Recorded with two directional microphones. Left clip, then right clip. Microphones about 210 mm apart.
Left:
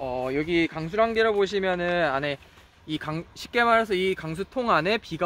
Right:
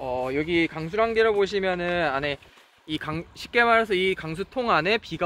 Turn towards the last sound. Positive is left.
turn(degrees=50)  # may be behind; listen again after turning